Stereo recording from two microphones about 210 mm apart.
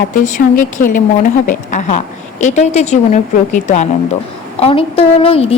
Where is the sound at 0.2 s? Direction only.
35° left (ahead or behind).